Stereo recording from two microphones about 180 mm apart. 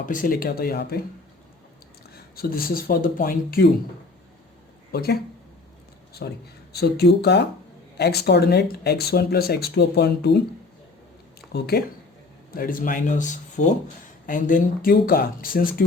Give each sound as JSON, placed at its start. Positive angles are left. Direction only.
{"t": 0.0, "sound": "speech", "side_deg": 50}
{"t": 2.3, "sound": "speech", "side_deg": 55}
{"t": 4.9, "sound": "speech", "side_deg": 60}
{"t": 6.2, "sound": "speech", "side_deg": 65}
{"t": 11.5, "sound": "speech", "side_deg": 60}